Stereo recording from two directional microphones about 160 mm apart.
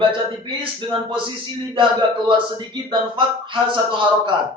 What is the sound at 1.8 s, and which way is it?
Speech, 30° right (ahead or behind).